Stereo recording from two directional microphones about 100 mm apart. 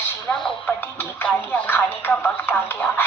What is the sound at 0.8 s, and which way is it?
Speech, 20° left (ahead or behind).